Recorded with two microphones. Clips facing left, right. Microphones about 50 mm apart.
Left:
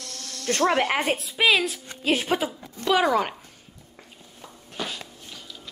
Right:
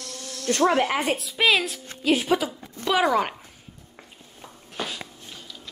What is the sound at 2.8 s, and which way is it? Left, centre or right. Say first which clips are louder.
Speech: even; centre.